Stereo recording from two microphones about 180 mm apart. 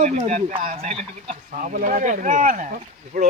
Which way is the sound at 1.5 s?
50° right (ahead or behind).